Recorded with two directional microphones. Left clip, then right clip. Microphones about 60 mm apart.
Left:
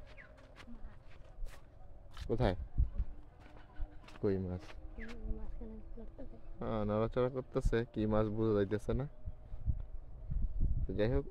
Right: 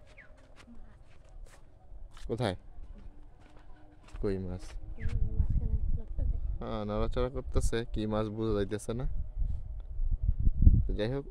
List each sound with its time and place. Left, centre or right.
0.1 s a sound: centre
2.2 s a man's voice: right
4.2 s speech: right
5.4 s a sound: centre
6.6 s speech: right
10.9 s speech: right